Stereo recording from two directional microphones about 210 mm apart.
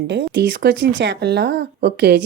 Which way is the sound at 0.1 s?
55° right (ahead or behind).